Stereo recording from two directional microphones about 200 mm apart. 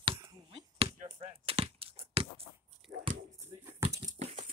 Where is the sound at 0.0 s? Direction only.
25° right (ahead or behind).